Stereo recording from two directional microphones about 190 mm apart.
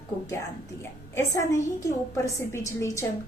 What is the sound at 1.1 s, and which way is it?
A woman's voice, 15° left (ahead or behind).